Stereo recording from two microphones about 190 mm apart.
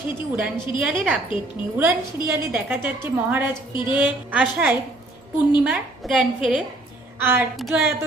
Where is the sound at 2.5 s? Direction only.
10° right (ahead or behind).